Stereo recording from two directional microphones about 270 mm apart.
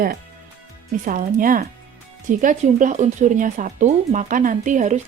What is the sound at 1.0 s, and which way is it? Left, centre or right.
Speech, right.